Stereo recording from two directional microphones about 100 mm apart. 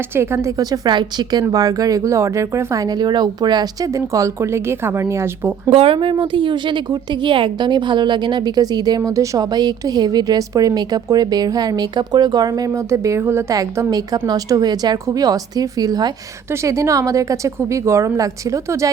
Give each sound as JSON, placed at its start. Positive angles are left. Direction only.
{"t": 0.1, "sound": "speech", "side_deg": -25}
{"t": 5.7, "sound": "a woman's voice", "side_deg": -65}